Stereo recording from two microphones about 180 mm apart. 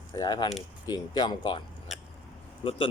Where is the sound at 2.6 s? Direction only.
30° left (ahead or behind).